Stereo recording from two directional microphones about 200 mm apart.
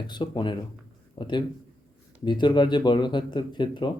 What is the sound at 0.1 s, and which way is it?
Speech, 25° left (ahead or behind).